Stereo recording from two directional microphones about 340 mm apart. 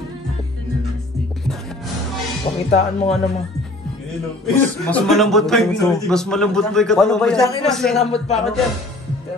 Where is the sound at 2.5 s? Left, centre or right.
Centre.